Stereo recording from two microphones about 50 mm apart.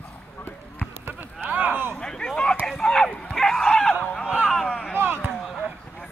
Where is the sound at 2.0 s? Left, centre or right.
Centre.